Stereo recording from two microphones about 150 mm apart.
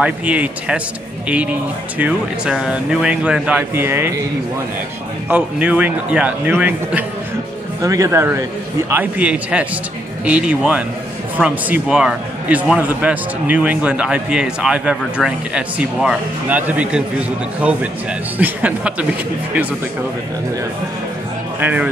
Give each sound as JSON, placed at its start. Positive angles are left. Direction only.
{"t": 0.0, "sound": "speech", "side_deg": -10}
{"t": 5.3, "sound": "speech", "side_deg": -10}
{"t": 7.8, "sound": "speech", "side_deg": -20}
{"t": 21.5, "sound": "speech", "side_deg": -10}